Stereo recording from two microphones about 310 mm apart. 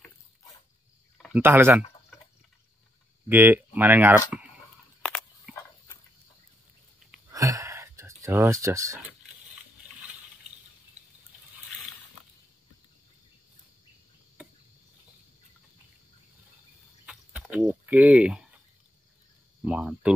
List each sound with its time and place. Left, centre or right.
1.1 s speech: centre
3.3 s speech: centre
7.3 s a sound: centre
14.4 s cricket: centre
17.0 s a sound: centre
19.6 s speech: centre